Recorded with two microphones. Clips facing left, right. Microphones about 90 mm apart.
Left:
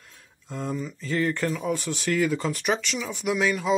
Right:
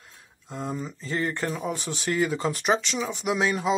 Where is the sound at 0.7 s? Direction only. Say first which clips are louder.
Left 2 dB; 30° right (ahead or behind).